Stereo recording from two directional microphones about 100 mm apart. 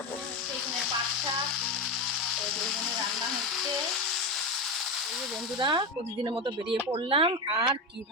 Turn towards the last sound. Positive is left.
turn(degrees=-60)  # may be behind; listen again after turning